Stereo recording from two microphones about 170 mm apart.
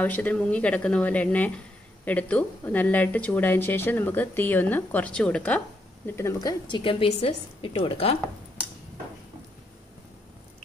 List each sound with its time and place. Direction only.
0.0 s speech: 10° left (ahead or behind)
6.7 s a woman's voice: 30° left (ahead or behind)